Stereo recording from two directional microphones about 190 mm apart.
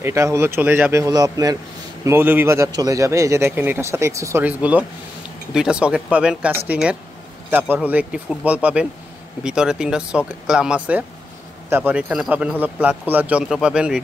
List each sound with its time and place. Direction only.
0.0 s a man's voice: 15° right (ahead or behind)